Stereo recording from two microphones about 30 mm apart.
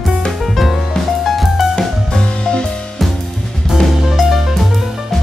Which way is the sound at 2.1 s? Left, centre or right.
Left.